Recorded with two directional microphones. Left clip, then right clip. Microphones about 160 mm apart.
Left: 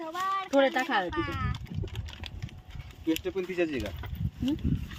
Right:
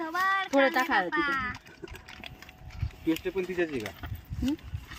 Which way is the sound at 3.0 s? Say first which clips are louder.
Right 1 dB; 90° left.